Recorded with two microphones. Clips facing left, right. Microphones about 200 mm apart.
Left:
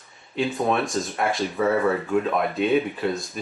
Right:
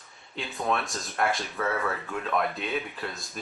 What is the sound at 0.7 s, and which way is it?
Speech, centre (ahead or behind).